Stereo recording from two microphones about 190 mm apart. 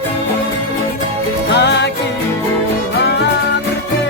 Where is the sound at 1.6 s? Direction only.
65° left (ahead or behind).